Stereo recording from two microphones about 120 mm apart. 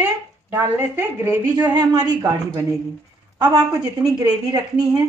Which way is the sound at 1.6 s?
35° right (ahead or behind).